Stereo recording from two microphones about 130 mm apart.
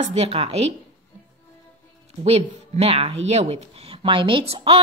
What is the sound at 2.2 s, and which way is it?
Speech, 55° right (ahead or behind).